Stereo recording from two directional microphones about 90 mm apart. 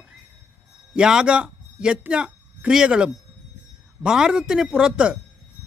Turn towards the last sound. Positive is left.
turn(degrees=-10)  # may be behind; listen again after turning